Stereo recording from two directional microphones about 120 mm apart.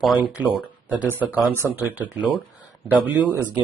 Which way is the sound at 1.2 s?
15° right (ahead or behind).